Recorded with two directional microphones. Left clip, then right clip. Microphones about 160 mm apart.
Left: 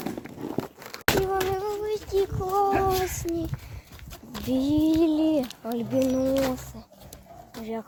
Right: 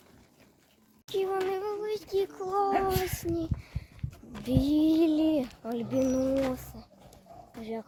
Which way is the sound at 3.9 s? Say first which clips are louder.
Left 9 dB; 80° left.